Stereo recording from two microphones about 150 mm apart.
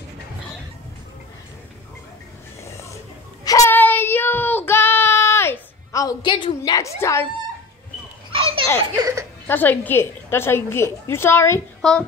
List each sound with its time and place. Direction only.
2.6 s a sound: 20° left (ahead or behind)
3.4 s child singing: 20° left (ahead or behind)
8.3 s baby laughter: 35° right (ahead or behind)
9.5 s a woman's voice: 10° left (ahead or behind)
11.8 s a woman's voice: 5° left (ahead or behind)